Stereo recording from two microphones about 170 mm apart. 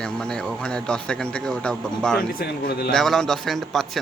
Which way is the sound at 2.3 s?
60° left (ahead or behind).